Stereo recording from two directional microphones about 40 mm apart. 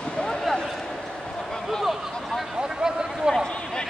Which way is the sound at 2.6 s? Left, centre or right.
Centre.